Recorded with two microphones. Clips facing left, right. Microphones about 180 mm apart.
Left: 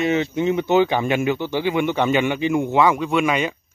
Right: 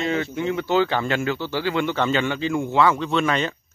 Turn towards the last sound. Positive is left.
turn(degrees=10)  # may be behind; listen again after turning